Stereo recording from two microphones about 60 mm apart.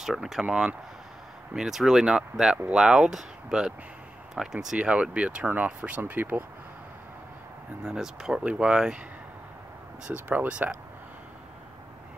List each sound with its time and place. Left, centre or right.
0.0 s speech: centre
4.7 s speech: centre
7.8 s speech: centre
10.1 s speech: right